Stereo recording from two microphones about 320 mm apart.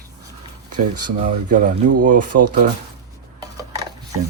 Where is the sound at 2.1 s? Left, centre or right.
Right.